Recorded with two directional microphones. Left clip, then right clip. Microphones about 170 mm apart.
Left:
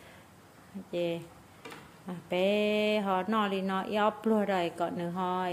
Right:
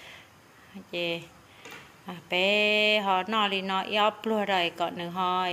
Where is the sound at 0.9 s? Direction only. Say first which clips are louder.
Right 2 dB; 20° left (ahead or behind).